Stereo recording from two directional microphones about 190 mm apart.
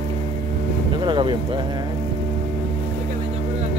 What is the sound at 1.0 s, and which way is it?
Music, 25° right (ahead or behind).